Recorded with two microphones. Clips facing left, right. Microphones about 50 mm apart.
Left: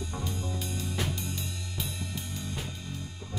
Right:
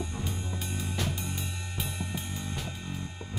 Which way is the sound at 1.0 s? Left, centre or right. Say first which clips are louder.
Even; centre.